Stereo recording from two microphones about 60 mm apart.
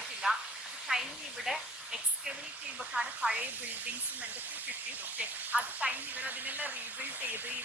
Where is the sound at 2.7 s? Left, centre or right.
Right.